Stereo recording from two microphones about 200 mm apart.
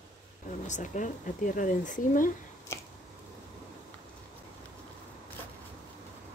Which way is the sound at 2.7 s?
15° left (ahead or behind).